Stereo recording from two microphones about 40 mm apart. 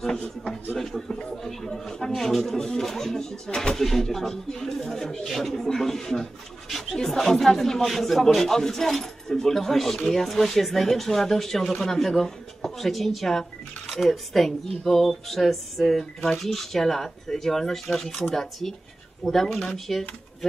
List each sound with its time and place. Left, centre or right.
0.7 s speech: centre
1.1 s speech: centre
1.4 s speech: centre